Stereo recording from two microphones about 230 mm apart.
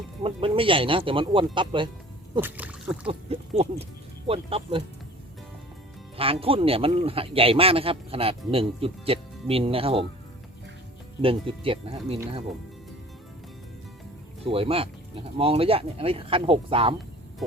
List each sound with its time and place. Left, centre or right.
0.2 s speech: right
2.4 s speech: centre
3.1 s speech: right
6.1 s speech: right
11.2 s speech: right
14.4 s speech: right